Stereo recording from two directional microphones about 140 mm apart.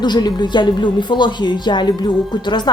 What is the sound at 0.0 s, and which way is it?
A woman's voice, 30° left (ahead or behind).